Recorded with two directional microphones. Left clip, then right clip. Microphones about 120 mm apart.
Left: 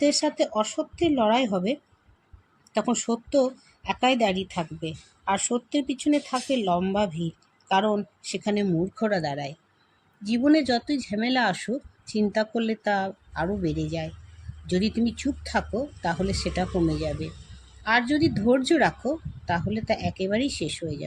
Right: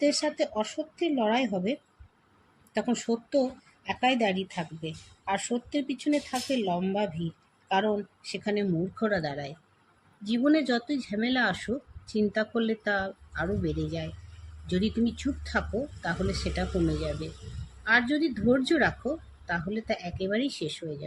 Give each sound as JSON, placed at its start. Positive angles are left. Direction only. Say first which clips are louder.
{"t": 0.0, "sound": "speech", "louder": "left 3 dB", "side_deg": 90}